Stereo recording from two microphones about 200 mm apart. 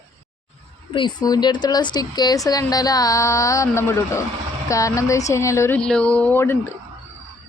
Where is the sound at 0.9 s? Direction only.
20° left (ahead or behind).